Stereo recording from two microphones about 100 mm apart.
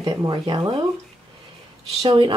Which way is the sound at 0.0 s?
45° right (ahead or behind).